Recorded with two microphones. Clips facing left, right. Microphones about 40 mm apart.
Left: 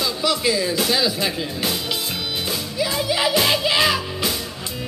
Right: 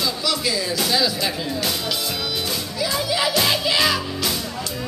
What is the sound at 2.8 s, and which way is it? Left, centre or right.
Speech, centre.